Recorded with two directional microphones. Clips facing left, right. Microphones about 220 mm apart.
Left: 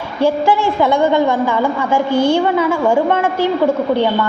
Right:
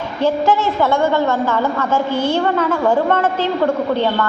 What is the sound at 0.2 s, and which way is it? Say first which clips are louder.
A woman's voice: left 2 dB; 10° left (ahead or behind).